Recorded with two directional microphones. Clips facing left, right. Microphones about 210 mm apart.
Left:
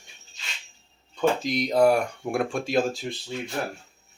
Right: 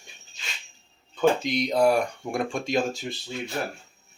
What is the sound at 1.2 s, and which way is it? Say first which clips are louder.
Speech: right 1 dB; centre (ahead or behind).